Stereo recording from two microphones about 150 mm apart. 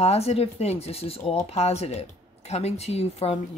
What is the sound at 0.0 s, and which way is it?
Speech, 45° left (ahead or behind).